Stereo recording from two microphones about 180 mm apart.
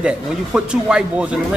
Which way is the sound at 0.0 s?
5° right (ahead or behind).